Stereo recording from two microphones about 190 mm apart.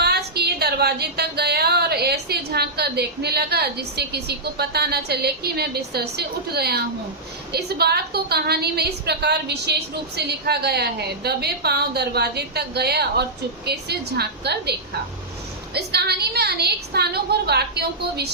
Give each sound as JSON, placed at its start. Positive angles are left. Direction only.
{"t": 0.0, "sound": "a woman's voice", "side_deg": -55}